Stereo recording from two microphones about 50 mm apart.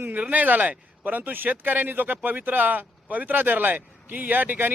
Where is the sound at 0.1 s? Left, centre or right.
Right.